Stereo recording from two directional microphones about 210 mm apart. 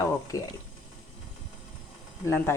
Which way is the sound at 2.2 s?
10° left (ahead or behind).